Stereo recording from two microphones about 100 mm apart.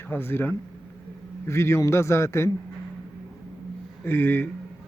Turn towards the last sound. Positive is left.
turn(degrees=20)  # may be behind; listen again after turning